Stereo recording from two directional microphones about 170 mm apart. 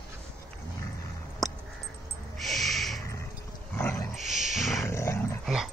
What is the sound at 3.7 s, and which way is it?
Dog, 15° left (ahead or behind).